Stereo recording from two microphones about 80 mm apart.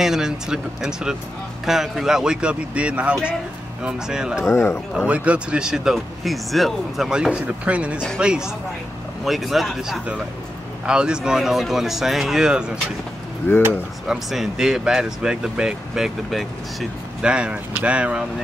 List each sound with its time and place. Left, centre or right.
0.0 s speech: centre
4.5 s a man's voice: left
4.9 s speech: centre
14.0 s speech: centre
17.2 s speech: centre